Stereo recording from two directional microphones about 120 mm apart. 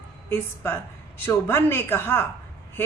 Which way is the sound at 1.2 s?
20° left (ahead or behind).